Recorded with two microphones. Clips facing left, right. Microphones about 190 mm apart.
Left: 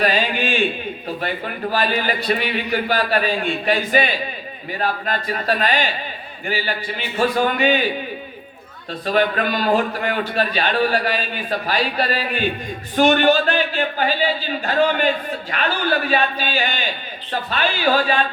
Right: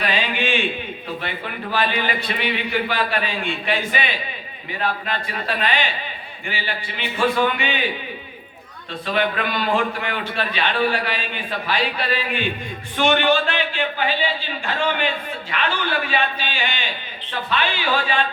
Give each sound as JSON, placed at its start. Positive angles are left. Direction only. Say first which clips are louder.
{"t": 0.0, "sound": "a man's voice", "louder": "left 3 dB", "side_deg": 40}
{"t": 8.9, "sound": "a man's voice", "louder": "left 3 dB", "side_deg": 40}